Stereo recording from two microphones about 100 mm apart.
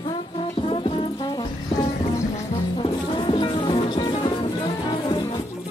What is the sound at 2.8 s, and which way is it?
Music, 55° left (ahead or behind).